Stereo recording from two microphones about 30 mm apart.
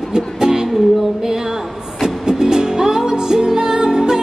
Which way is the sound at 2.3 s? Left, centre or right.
Centre.